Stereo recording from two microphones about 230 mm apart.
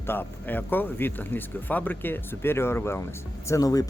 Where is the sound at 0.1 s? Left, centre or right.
Centre.